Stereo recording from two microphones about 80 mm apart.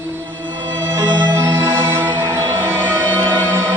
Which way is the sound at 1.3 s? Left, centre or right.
Right.